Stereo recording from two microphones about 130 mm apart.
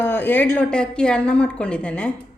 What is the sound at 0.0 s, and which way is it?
Speech, 15° left (ahead or behind).